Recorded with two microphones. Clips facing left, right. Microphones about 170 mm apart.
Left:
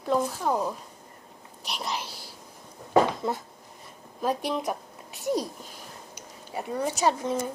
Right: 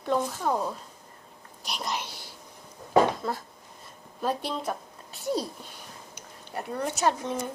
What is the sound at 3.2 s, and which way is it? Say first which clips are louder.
A woman's voice: left 2 dB; 20° left (ahead or behind).